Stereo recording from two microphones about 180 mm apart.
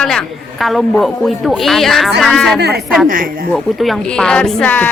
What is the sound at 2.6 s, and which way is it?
Speech, 65° right (ahead or behind).